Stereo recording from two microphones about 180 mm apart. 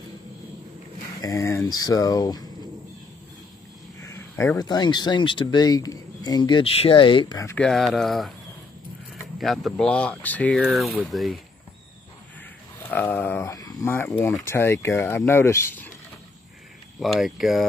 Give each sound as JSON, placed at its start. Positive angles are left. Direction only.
{"t": 1.2, "sound": "speech", "side_deg": 15}
{"t": 4.0, "sound": "speech", "side_deg": 15}
{"t": 7.5, "sound": "speech", "side_deg": 0}
{"t": 9.4, "sound": "speech", "side_deg": 0}
{"t": 12.7, "sound": "speech", "side_deg": 10}
{"t": 17.0, "sound": "speech", "side_deg": 0}